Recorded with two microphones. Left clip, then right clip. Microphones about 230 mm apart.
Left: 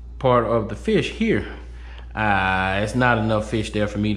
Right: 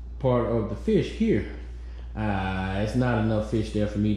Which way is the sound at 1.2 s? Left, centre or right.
Centre.